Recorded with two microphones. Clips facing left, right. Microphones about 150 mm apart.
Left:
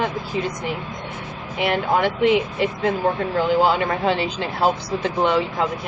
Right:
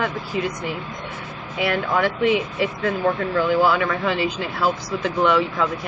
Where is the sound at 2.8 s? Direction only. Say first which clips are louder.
Even; 30° left (ahead or behind).